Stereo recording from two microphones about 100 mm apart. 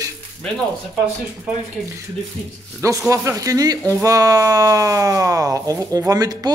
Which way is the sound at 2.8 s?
30° right (ahead or behind).